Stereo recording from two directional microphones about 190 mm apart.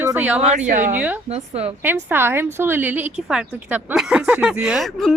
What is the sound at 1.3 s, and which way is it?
Speech, 30° right (ahead or behind).